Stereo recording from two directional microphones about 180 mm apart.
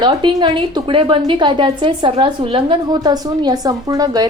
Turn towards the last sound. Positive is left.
turn(degrees=-20)  # may be behind; listen again after turning